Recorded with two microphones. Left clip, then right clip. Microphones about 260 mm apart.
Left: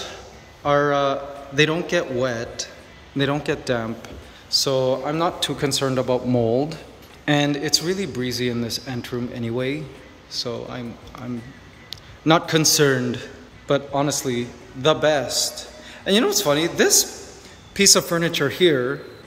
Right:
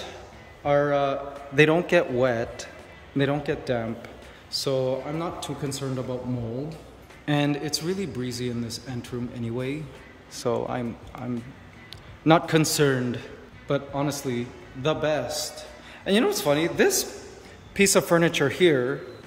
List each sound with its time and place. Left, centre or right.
0.7 s a man's voice: centre
7.2 s a man's voice: centre